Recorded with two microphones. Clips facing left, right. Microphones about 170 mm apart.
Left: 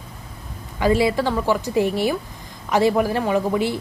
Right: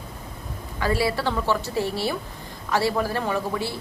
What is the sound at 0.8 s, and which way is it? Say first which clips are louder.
Speech: left 6 dB; 20° left (ahead or behind).